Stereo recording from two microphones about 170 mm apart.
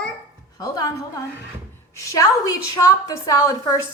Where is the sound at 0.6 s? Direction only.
20° left (ahead or behind).